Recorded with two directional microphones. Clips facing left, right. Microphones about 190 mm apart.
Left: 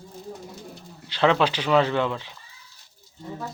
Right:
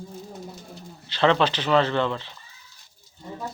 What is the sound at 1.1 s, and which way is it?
Speech, 5° left (ahead or behind).